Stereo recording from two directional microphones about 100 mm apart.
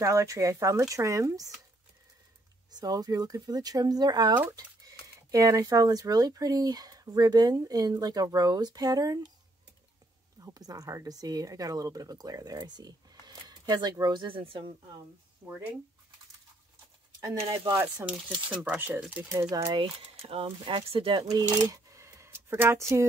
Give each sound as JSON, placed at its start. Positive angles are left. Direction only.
{"t": 0.0, "sound": "speech", "side_deg": -30}
{"t": 2.7, "sound": "speech", "side_deg": -40}
{"t": 10.4, "sound": "speech", "side_deg": -40}
{"t": 15.4, "sound": "speech", "side_deg": -30}
{"t": 17.6, "sound": "speech", "side_deg": -25}
{"t": 18.0, "sound": "speech", "side_deg": -10}
{"t": 19.7, "sound": "speech", "side_deg": -65}
{"t": 21.3, "sound": "speech", "side_deg": -40}